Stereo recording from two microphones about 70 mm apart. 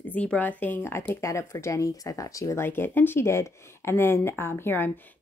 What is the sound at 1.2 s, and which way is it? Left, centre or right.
Speech, left.